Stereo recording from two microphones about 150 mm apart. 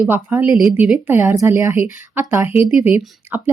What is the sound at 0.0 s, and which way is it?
Speech, 15° right (ahead or behind).